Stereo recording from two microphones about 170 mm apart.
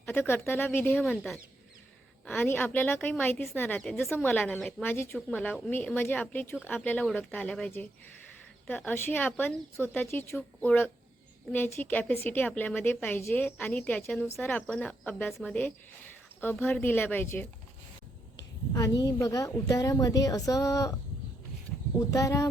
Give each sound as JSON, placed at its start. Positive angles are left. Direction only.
{"t": 0.0, "sound": "a woman's voice", "side_deg": 15}
{"t": 18.7, "sound": "a woman's voice", "side_deg": 20}
{"t": 21.9, "sound": "a woman's voice", "side_deg": 20}